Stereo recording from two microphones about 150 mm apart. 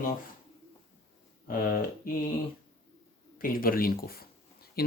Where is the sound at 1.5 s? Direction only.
70° left (ahead or behind).